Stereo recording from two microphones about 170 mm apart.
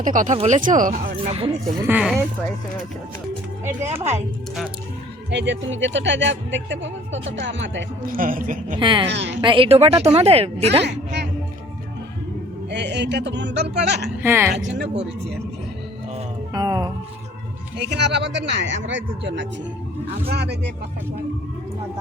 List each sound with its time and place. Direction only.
0.0 s speech: 50° right (ahead or behind)
1.8 s speech: 10° right (ahead or behind)
5.3 s speech: 90° right
8.0 s a woman's voice: 55° right (ahead or behind)
8.8 s music: 30° right (ahead or behind)
9.0 s speech: 90° right
9.4 s a woman's voice: 30° right (ahead or behind)
10.8 s a woman's voice: 85° right
12.7 s speech: 90° right
14.2 s speech: 15° right (ahead or behind)
14.5 s speech: 85° right
16.5 s music: 25° right (ahead or behind)
17.7 s speech: 90° right